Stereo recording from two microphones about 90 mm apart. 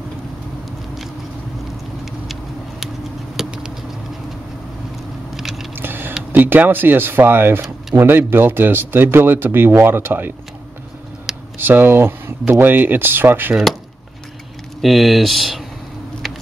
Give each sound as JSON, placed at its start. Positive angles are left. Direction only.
{"t": 3.3, "sound": "patter", "side_deg": -10}
{"t": 5.3, "sound": "biting", "side_deg": -5}
{"t": 5.8, "sound": "a sound", "side_deg": -25}
{"t": 6.3, "sound": "speech", "side_deg": -20}
{"t": 11.5, "sound": "speech", "side_deg": -25}
{"t": 14.8, "sound": "speech", "side_deg": 0}
{"t": 16.2, "sound": "a sound", "side_deg": 0}